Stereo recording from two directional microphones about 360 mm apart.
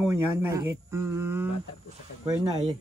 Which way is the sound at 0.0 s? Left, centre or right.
Centre.